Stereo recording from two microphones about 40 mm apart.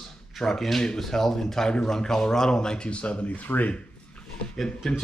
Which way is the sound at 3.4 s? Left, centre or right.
Left.